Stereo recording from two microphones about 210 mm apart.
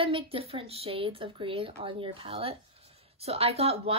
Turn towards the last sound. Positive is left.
turn(degrees=-30)  # may be behind; listen again after turning